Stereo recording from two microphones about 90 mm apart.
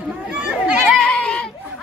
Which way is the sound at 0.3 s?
10° right (ahead or behind).